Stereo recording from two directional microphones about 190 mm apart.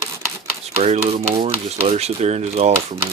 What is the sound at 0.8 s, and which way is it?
Speech, 35° right (ahead or behind).